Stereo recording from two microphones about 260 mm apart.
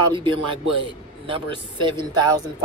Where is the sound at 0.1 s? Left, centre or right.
Centre.